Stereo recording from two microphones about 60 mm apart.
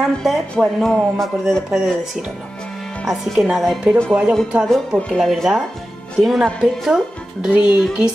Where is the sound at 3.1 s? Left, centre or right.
Centre.